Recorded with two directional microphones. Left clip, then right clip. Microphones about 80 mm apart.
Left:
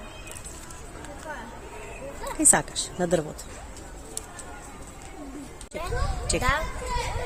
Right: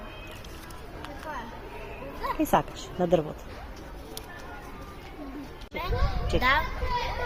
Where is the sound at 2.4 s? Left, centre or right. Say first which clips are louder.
Left 2 dB; left.